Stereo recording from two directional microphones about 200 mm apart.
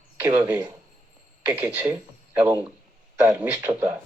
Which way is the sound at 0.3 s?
20° right (ahead or behind).